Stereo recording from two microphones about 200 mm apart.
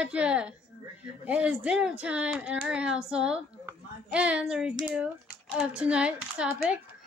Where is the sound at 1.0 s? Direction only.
5° right (ahead or behind).